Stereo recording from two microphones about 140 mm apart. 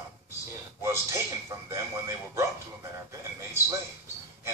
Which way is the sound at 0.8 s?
20° right (ahead or behind).